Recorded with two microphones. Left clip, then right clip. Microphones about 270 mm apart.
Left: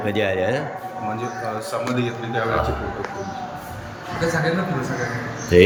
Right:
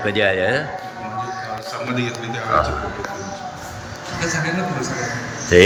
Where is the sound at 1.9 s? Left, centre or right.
Left.